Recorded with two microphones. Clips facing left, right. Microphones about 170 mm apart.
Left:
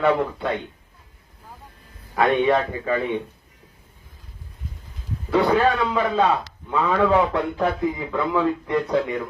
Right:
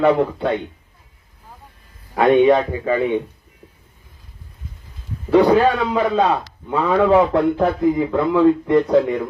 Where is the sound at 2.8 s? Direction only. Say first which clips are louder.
Right 5 dB; 40° right (ahead or behind).